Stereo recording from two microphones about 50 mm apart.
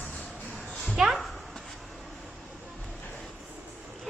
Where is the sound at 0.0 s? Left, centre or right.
Left.